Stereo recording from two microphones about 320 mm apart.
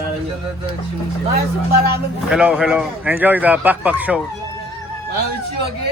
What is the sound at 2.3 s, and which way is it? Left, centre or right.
Speech, centre.